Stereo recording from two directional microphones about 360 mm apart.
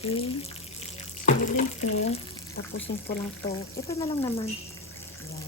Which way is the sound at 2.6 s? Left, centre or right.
Left.